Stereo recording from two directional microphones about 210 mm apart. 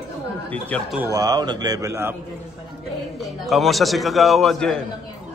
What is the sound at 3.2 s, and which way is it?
A man's voice, centre (ahead or behind).